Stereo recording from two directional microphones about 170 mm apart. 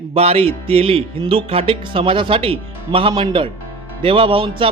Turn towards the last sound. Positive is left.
turn(degrees=-30)  # may be behind; listen again after turning